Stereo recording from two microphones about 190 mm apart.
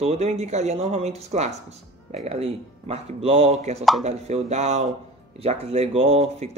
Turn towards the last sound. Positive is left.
turn(degrees=-35)  # may be behind; listen again after turning